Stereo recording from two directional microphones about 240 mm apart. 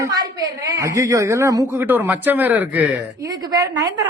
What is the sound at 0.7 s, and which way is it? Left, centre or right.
A man's voice, centre.